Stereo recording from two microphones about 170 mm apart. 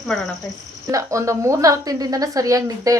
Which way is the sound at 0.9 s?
20° right (ahead or behind).